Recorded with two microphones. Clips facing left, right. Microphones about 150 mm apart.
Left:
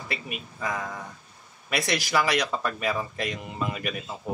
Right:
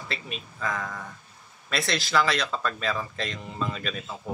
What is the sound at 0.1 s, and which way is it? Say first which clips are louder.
Speech: left 2 dB; 15° left (ahead or behind).